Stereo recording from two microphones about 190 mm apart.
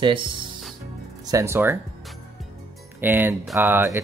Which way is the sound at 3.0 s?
10° right (ahead or behind).